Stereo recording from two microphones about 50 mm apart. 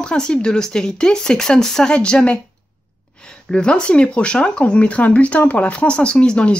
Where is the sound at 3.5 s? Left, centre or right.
Centre.